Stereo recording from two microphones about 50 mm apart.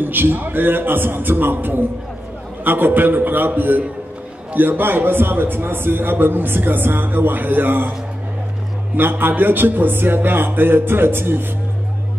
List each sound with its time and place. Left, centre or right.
0.0 s a man's voice: right
9.2 s a man's voice: right